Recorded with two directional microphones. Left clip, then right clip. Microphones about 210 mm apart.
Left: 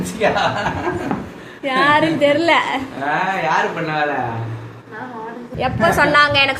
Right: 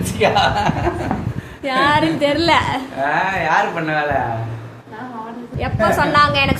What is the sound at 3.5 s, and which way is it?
Speech, 20° right (ahead or behind).